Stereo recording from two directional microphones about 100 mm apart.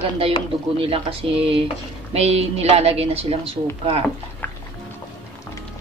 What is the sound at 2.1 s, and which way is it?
Speech, 90° right.